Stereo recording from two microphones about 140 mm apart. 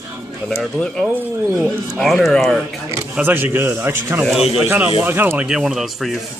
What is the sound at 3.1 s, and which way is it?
A man's voice, 15° right (ahead or behind).